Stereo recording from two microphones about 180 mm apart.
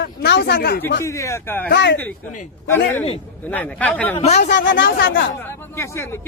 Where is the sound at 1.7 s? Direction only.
75° left (ahead or behind).